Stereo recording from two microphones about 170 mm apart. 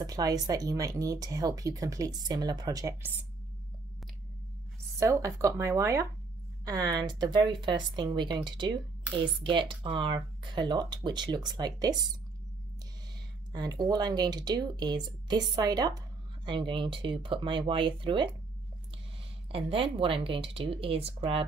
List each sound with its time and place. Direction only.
0.0 s speech: 20° right (ahead or behind)
5.0 s speech: 15° right (ahead or behind)
13.5 s speech: 25° right (ahead or behind)
19.5 s speech: 30° right (ahead or behind)